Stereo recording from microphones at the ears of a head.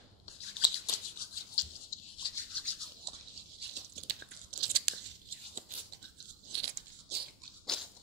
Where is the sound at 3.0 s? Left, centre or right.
Right.